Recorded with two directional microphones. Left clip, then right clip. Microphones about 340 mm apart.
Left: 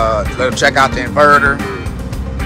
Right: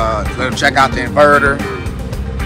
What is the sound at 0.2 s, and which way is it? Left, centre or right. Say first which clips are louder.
Speech: left 2 dB; centre.